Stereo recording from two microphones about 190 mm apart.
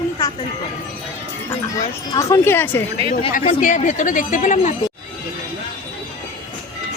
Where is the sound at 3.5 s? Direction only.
40° left (ahead or behind).